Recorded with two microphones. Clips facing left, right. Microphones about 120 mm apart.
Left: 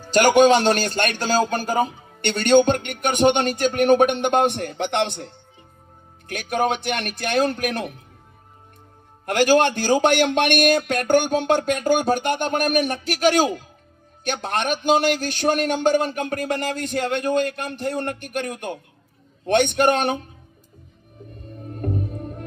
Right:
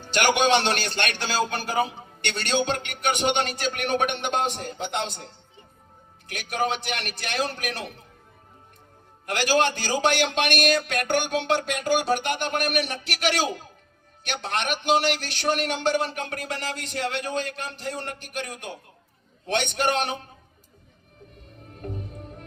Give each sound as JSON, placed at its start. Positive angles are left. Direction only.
{"t": 0.0, "sound": "a man's voice", "side_deg": 40}
{"t": 6.2, "sound": "a man's voice", "side_deg": 50}
{"t": 9.2, "sound": "a man's voice", "side_deg": 50}
{"t": 21.7, "sound": "music", "side_deg": 50}